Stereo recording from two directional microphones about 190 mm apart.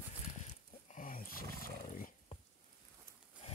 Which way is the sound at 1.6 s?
45° left (ahead or behind).